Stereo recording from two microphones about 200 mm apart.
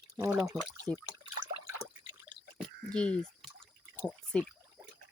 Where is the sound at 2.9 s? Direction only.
5° left (ahead or behind).